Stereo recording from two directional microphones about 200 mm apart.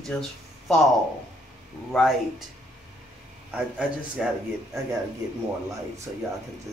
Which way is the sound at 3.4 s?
5° right (ahead or behind).